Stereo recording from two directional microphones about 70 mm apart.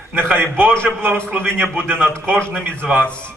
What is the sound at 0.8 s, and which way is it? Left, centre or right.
A man's voice, right.